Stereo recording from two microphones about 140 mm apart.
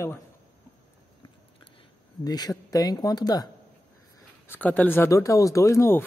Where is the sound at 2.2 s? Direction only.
30° left (ahead or behind).